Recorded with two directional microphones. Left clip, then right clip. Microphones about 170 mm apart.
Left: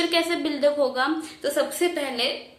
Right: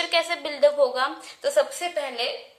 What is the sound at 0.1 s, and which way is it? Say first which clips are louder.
A woman's voice: left 1 dB; 35° right (ahead or behind).